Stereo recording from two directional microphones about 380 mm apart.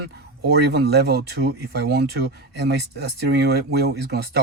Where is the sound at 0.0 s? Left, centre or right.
Right.